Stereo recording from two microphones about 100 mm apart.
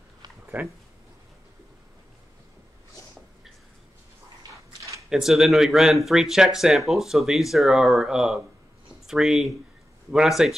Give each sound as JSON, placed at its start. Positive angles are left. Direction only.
{"t": 0.5, "sound": "speech", "side_deg": -20}
{"t": 5.1, "sound": "speech", "side_deg": -5}